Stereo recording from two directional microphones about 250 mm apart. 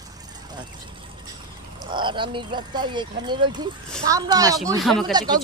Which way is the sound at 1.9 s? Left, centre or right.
Centre.